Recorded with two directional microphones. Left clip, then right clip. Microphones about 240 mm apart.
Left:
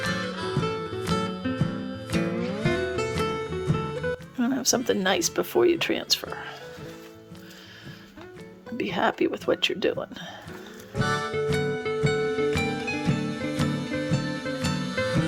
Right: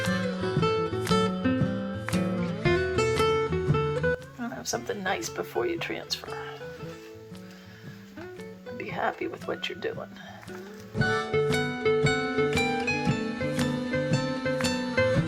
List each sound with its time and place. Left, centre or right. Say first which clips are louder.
0.0 s music: even; centre
4.4 s speech: left 8 dB; left
8.8 s speech: left 6 dB; left
10.9 s music: right 1 dB; centre